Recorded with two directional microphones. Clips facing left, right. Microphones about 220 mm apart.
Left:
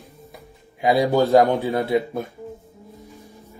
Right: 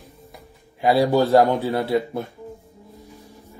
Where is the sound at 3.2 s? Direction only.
15° left (ahead or behind).